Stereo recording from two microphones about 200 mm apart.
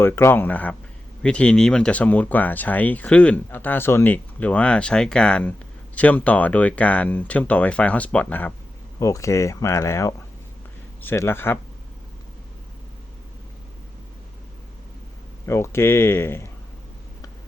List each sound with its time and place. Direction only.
0.0 s speech: 10° left (ahead or behind)
15.4 s speech: 15° left (ahead or behind)